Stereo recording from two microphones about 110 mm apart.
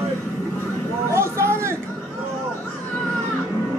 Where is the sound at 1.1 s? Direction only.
25° right (ahead or behind).